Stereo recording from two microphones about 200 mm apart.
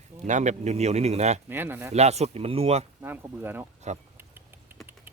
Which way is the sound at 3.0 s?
10° right (ahead or behind).